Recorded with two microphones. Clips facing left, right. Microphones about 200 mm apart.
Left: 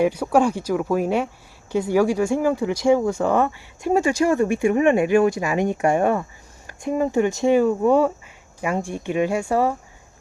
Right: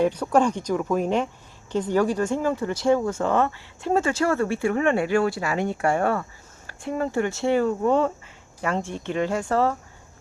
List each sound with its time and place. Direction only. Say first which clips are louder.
0.0 s speech: left 2 dB; 10° left (ahead or behind)